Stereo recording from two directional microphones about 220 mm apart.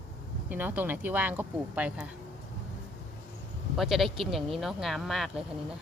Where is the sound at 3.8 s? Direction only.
Centre (ahead or behind).